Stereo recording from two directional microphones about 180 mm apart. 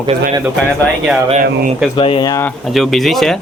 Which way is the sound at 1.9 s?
30° left (ahead or behind).